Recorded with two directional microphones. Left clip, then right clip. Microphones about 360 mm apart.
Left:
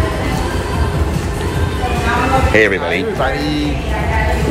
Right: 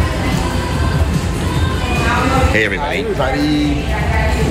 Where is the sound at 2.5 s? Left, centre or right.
Centre.